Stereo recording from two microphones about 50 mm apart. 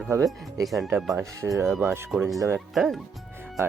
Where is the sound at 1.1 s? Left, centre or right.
Right.